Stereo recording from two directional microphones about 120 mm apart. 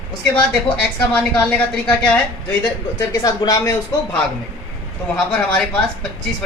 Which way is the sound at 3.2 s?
30° left (ahead or behind).